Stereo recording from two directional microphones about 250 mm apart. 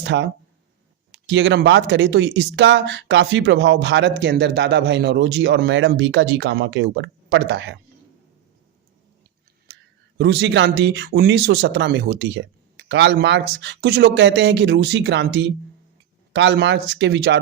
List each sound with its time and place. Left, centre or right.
0.0 s speech: right
10.2 s speech: right